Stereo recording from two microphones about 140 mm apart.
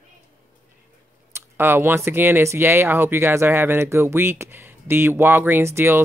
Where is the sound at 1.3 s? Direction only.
15° right (ahead or behind).